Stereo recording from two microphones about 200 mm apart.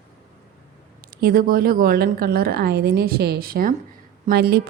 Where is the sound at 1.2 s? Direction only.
45° right (ahead or behind).